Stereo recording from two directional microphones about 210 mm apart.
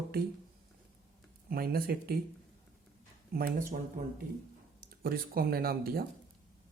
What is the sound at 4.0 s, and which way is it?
Speech, 45° right (ahead or behind).